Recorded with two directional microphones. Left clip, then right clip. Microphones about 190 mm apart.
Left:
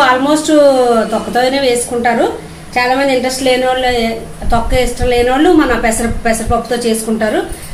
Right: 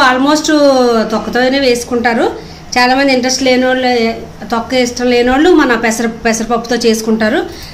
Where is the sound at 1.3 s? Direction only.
35° right (ahead or behind).